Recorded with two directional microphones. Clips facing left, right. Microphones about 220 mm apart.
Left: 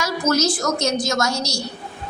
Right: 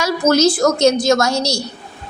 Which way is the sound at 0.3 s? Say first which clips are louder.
Right 7 dB; 30° right (ahead or behind).